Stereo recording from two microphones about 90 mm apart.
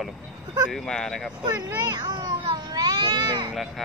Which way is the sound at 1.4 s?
50° right (ahead or behind).